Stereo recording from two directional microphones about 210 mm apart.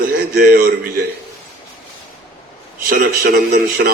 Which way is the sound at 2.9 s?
45° right (ahead or behind).